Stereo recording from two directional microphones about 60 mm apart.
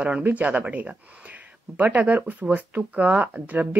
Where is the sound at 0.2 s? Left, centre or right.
Right.